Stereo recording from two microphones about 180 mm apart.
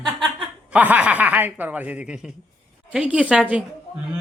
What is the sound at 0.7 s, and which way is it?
Speech, 10° right (ahead or behind).